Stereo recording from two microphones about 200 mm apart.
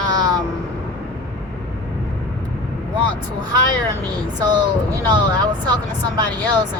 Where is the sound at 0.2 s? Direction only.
20° right (ahead or behind).